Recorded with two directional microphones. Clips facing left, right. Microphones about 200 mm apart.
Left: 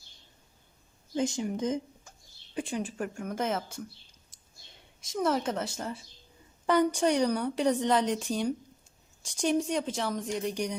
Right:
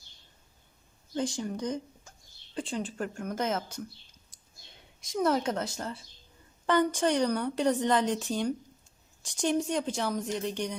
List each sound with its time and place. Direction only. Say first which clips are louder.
1.1 s speech: left 2 dB; 20° left (ahead or behind)
5.1 s a woman's voice: right 1 dB; centre (ahead or behind)